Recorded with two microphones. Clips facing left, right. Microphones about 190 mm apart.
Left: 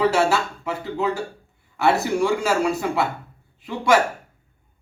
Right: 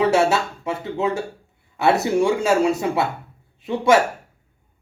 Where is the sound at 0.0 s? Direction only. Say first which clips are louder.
Right 2 dB; 25° right (ahead or behind).